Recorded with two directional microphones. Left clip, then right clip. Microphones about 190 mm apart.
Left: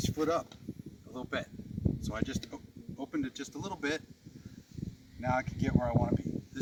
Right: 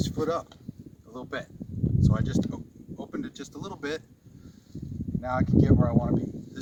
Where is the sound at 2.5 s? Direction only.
5° right (ahead or behind).